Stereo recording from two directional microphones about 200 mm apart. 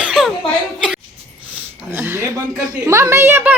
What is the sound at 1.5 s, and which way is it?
A woman's voice, 5° right (ahead or behind).